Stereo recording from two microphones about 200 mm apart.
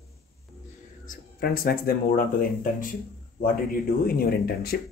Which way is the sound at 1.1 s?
45° left (ahead or behind).